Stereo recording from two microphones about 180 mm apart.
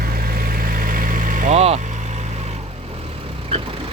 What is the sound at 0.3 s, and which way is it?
Vehicle, 55° right (ahead or behind).